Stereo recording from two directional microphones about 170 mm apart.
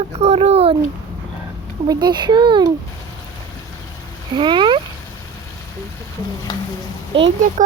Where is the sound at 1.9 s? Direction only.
25° right (ahead or behind).